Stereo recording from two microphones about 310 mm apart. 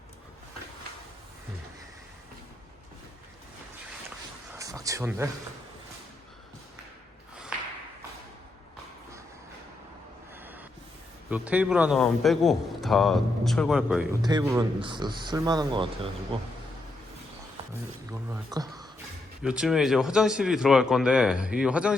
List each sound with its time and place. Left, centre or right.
4.5 s a sound: centre
10.4 s train: centre
11.3 s a man's voice: centre
14.2 s speech: centre
18.1 s a man's voice: centre